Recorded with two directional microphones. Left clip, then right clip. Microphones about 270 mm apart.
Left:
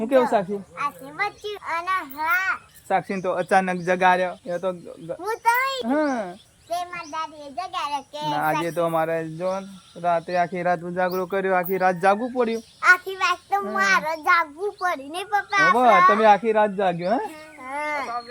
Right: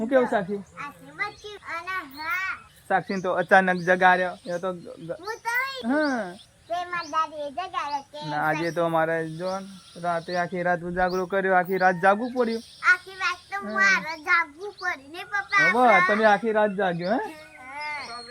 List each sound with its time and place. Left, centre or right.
0.0 s speech: centre
2.9 s a child's voice: centre
7.5 s a child's voice: centre
17.7 s a sound: centre